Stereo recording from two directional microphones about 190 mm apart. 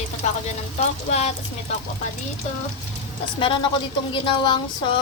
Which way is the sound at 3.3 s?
25° left (ahead or behind).